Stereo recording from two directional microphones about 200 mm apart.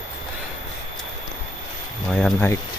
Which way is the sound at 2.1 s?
5° left (ahead or behind).